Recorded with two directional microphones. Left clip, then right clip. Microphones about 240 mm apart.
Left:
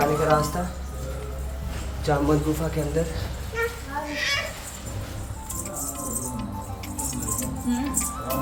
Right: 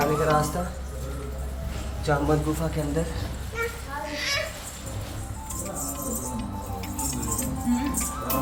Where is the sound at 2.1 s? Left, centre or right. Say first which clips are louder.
Left 1 dB; centre.